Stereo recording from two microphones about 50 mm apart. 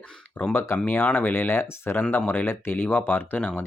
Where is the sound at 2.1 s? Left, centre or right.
Left.